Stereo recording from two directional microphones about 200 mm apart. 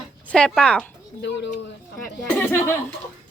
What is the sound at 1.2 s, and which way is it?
Speech, 60° left (ahead or behind).